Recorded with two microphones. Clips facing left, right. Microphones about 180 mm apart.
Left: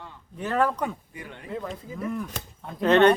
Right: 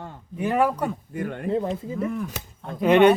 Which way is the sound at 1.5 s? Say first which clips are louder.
Right 8 dB; 30° right (ahead or behind).